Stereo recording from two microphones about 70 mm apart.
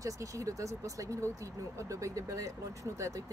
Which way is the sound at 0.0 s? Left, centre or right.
Right.